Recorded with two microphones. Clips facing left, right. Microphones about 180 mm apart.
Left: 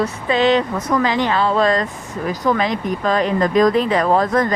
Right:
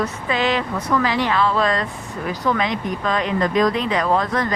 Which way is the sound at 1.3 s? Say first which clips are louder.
Left 3 dB; 35° left (ahead or behind).